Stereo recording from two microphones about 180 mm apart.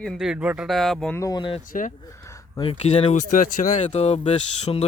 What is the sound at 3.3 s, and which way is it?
Speech, 50° left (ahead or behind).